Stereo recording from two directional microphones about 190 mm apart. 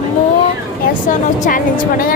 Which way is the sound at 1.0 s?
45° left (ahead or behind).